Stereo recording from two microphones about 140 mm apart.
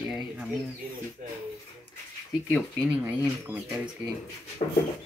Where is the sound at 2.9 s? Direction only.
10° right (ahead or behind).